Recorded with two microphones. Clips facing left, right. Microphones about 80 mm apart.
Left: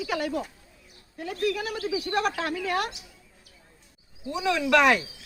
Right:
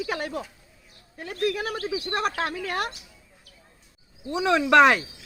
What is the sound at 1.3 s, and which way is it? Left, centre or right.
Speech, right.